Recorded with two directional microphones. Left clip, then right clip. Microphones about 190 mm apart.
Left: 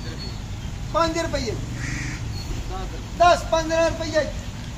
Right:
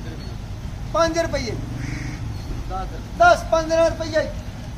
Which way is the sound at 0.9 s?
5° right (ahead or behind).